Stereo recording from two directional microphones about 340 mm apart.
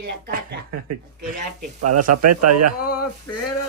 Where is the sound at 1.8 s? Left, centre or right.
Right.